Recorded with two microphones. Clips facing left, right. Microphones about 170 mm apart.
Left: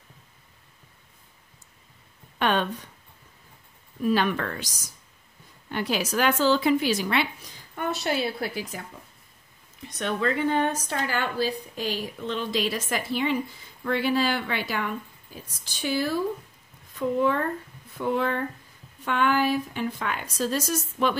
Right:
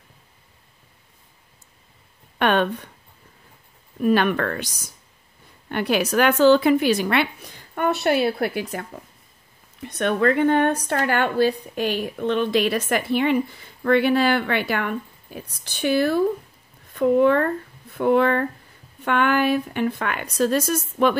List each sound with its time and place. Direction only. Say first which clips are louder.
2.3 s speech: right 5 dB; 60° right (ahead or behind)
4.0 s speech: right 5 dB; 60° right (ahead or behind)
9.8 s speech: right 7 dB; 60° right (ahead or behind)